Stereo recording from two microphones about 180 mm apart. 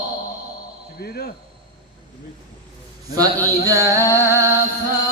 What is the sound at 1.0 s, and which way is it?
Cricket, 60° left (ahead or behind).